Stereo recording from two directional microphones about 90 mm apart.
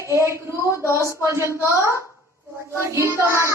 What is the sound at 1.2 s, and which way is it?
Speech, 30° right (ahead or behind).